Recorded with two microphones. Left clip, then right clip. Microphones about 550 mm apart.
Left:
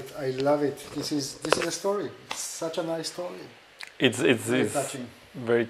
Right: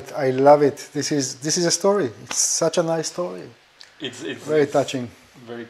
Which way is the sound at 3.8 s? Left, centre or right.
Left.